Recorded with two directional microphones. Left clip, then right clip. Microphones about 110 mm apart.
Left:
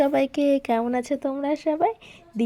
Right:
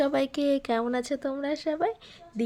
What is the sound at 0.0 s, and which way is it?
A woman's voice, 15° left (ahead or behind).